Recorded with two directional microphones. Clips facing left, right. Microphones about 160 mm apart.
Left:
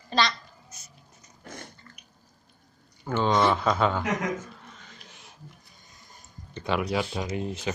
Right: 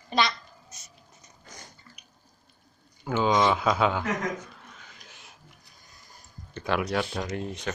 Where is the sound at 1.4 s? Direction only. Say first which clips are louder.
Left 7 dB; 60° left (ahead or behind).